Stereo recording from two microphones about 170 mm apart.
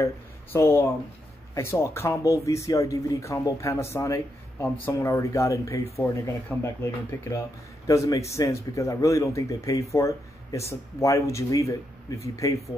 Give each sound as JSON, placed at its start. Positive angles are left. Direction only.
{"t": 0.0, "sound": "speech", "side_deg": 15}